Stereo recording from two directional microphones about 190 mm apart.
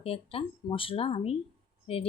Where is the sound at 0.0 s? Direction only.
30° left (ahead or behind).